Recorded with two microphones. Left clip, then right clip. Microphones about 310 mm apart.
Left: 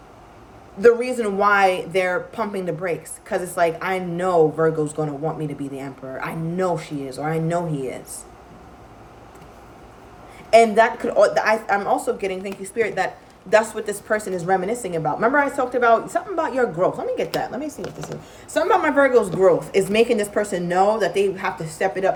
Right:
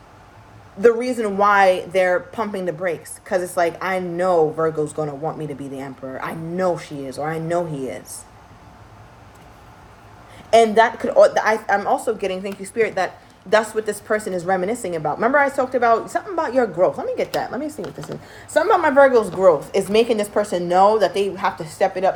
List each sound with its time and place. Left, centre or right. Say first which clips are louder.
0.8 s a woman's voice: even; centre
10.6 s a woman's voice: right 3 dB; centre